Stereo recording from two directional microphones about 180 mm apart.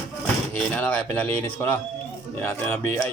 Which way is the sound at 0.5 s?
10° left (ahead or behind).